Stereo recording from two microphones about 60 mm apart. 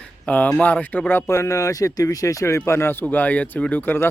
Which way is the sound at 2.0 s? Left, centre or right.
Left.